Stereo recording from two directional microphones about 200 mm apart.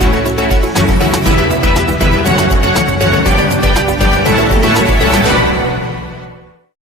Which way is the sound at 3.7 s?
Centre (ahead or behind).